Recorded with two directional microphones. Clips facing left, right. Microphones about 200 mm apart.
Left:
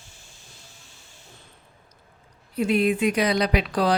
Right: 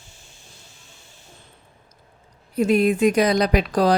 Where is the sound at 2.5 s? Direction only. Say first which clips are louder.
Right 3 dB; 45° right (ahead or behind).